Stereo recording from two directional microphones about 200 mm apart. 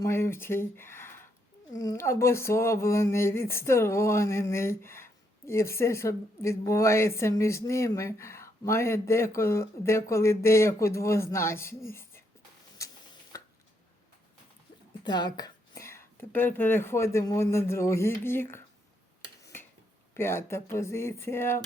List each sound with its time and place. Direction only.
0.0 s speech: 15° left (ahead or behind)
13.3 s a sound: 15° left (ahead or behind)
15.0 s speech: 20° left (ahead or behind)
19.4 s finger snapping: 15° left (ahead or behind)
20.1 s speech: 15° left (ahead or behind)